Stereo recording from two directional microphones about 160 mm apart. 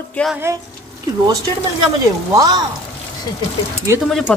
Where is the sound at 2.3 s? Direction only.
25° right (ahead or behind).